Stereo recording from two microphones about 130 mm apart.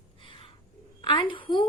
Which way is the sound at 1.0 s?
40° left (ahead or behind).